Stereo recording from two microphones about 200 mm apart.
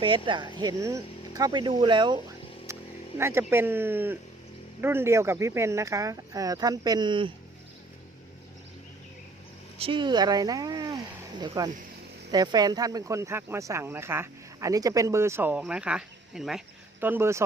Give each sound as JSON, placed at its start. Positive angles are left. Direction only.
{"t": 0.3, "sound": "speech", "side_deg": -20}
{"t": 2.7, "sound": "vehicle", "side_deg": -15}
{"t": 3.2, "sound": "speech", "side_deg": -10}
{"t": 9.7, "sound": "speech", "side_deg": -25}